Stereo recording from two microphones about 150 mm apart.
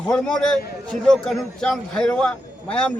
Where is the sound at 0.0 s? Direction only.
5° left (ahead or behind).